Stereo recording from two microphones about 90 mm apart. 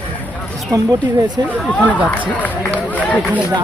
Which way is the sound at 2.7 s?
15° left (ahead or behind).